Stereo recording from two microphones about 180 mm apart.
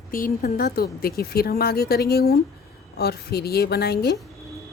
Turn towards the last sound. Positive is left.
turn(degrees=60)  # may be behind; listen again after turning